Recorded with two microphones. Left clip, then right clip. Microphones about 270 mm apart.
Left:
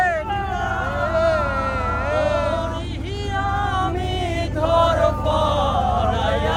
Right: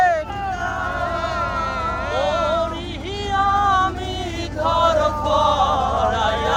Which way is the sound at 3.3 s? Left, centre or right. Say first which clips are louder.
Right 6 dB; right.